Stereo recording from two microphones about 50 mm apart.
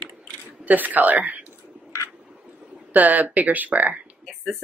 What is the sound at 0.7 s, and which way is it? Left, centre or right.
Speech, right.